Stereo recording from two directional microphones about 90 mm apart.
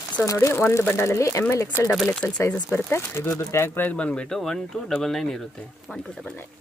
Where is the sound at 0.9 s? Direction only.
30° left (ahead or behind).